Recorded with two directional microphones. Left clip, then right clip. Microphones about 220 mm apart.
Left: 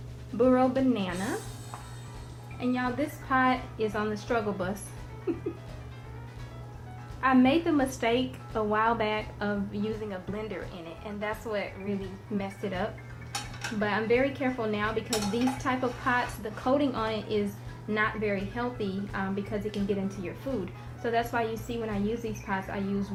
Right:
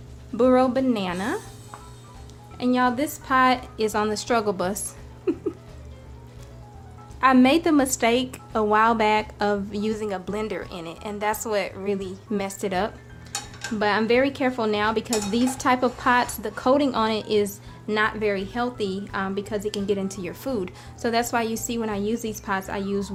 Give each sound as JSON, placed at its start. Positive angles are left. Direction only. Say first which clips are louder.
{"t": 0.3, "sound": "a woman's voice", "louder": "right 5 dB", "side_deg": -40}
{"t": 1.1, "sound": "speech", "louder": "right 6 dB", "side_deg": 0}
{"t": 2.6, "sound": "dishes", "louder": "right 8 dB", "side_deg": -50}
{"t": 5.3, "sound": "a woman's voice", "louder": "right 7 dB", "side_deg": -40}
{"t": 7.2, "sound": "dishes", "louder": "right 6 dB", "side_deg": -45}